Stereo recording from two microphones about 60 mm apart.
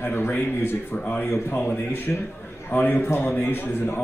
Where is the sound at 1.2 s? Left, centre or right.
Left.